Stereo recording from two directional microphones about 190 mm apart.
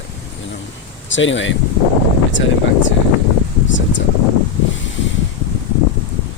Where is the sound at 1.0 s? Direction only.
80° left.